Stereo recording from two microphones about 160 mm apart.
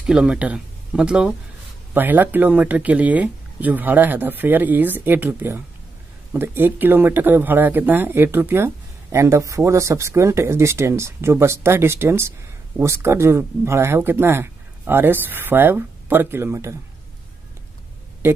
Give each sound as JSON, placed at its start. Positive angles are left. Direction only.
{"t": 0.0, "sound": "speech", "side_deg": -5}
{"t": 18.2, "sound": "speech", "side_deg": -15}